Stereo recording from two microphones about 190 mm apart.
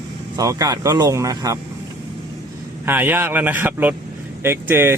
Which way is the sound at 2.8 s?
10° right (ahead or behind).